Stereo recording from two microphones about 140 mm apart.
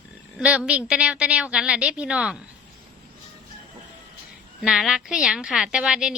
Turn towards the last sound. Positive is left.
turn(degrees=-5)  # may be behind; listen again after turning